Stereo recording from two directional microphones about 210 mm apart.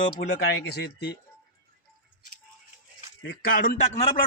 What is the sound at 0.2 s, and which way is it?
Speech, 50° left (ahead or behind).